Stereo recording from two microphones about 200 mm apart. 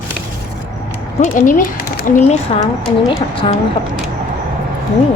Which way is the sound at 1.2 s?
40° left (ahead or behind).